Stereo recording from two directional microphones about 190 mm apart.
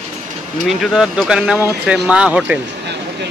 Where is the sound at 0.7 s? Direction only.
Centre (ahead or behind).